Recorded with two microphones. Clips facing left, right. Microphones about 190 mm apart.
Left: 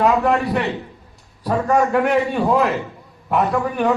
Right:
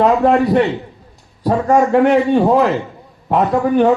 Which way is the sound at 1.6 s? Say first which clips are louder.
Right 5 dB; 30° right (ahead or behind).